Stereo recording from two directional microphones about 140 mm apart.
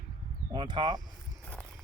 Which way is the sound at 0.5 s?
35° right (ahead or behind).